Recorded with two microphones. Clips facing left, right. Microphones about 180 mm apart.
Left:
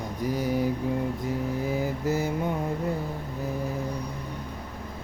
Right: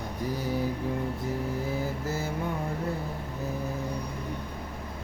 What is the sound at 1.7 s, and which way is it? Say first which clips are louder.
Mantra: left 4 dB; 15° left (ahead or behind).